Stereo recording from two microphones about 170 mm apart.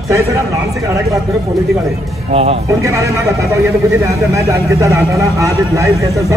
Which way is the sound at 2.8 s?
20° right (ahead or behind).